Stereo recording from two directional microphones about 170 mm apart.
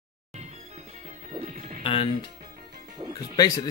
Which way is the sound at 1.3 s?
45° right (ahead or behind).